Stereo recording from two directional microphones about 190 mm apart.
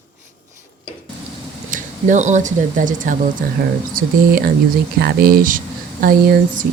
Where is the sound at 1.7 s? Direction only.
40° right (ahead or behind).